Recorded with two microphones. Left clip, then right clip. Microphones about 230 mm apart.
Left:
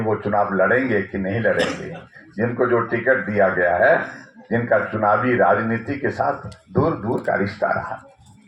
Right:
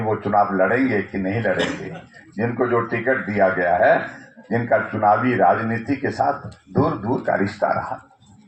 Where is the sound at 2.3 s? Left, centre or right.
Left.